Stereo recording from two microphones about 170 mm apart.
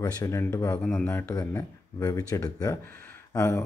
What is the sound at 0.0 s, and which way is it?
A man's voice, 20° left (ahead or behind).